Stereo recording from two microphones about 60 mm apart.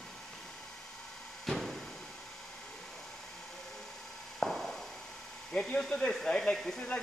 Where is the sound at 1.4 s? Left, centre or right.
Centre.